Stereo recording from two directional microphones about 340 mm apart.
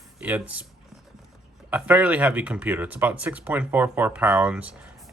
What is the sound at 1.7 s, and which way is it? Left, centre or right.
Speech, centre.